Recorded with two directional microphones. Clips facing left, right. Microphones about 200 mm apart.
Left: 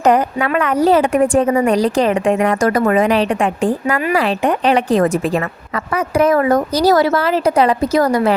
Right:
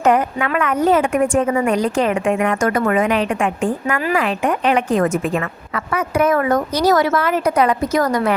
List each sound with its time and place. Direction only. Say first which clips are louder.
0.0 s a woman's voice: left 2 dB; 35° left (ahead or behind)